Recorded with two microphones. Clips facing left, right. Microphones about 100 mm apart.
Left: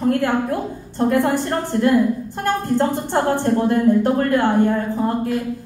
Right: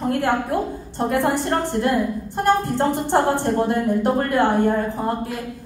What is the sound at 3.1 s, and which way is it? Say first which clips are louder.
A woman's voice: even; 20° right (ahead or behind).